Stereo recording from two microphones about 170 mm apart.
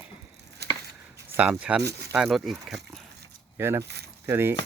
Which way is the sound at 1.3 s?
5° right (ahead or behind).